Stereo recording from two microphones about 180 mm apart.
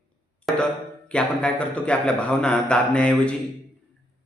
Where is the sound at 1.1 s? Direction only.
5° left (ahead or behind).